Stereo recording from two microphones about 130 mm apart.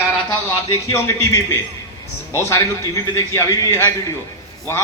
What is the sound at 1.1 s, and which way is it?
A man's voice, 20° left (ahead or behind).